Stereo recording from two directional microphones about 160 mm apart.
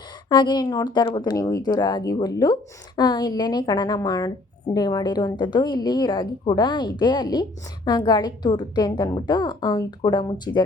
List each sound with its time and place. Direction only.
0.3 s speech: 25° left (ahead or behind)